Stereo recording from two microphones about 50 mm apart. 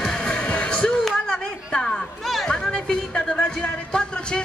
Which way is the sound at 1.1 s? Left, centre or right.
Centre.